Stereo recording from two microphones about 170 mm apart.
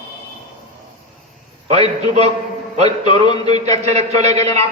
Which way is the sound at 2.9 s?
25° left (ahead or behind).